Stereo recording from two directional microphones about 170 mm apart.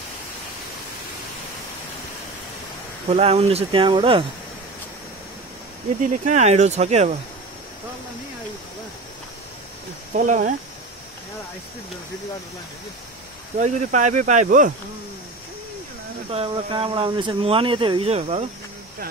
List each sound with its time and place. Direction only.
3.1 s speech: 35° right (ahead or behind)
6.2 s speech: 40° right (ahead or behind)
10.1 s speech: 50° right (ahead or behind)
13.6 s speech: 45° right (ahead or behind)
16.3 s speech: 30° right (ahead or behind)